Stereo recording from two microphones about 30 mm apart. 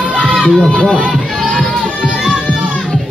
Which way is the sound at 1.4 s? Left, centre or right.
Centre.